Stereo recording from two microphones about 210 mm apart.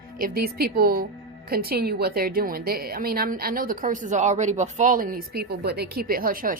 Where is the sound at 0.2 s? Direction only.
45° right (ahead or behind).